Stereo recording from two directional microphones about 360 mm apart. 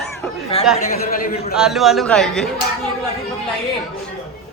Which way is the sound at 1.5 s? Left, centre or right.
Centre.